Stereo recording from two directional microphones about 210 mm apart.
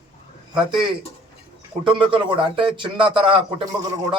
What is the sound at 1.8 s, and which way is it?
A man's voice, 25° right (ahead or behind).